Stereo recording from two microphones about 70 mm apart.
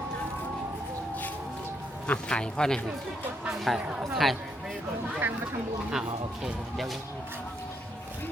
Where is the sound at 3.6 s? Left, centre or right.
Centre.